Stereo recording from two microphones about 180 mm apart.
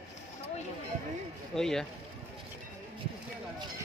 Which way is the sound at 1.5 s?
5° left (ahead or behind).